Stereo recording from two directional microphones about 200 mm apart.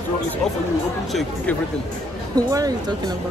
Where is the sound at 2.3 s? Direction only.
20° right (ahead or behind).